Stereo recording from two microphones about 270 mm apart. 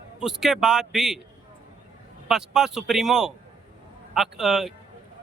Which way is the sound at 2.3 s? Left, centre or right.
Centre.